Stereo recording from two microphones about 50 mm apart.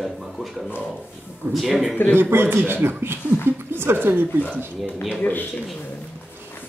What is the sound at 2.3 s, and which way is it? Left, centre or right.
A woman's voice, right.